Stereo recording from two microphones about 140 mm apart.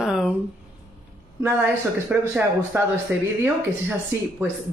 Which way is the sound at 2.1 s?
10° right (ahead or behind).